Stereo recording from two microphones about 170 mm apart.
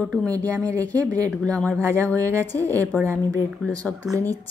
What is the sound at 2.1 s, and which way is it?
Speech, 20° right (ahead or behind).